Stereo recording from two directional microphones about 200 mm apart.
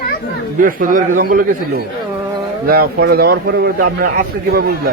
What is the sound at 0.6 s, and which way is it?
Speech, 45° right (ahead or behind).